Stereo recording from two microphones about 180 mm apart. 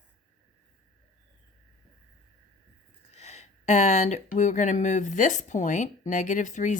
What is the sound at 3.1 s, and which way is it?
Speech, 35° left (ahead or behind).